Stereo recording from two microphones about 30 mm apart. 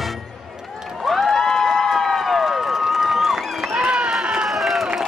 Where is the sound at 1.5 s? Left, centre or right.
Centre.